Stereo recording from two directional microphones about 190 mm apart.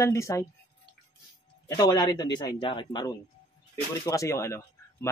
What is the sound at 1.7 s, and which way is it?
A man's voice, 20° left (ahead or behind).